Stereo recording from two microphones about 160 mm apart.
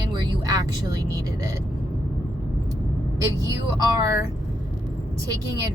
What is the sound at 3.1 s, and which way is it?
A woman's voice, 20° right (ahead or behind).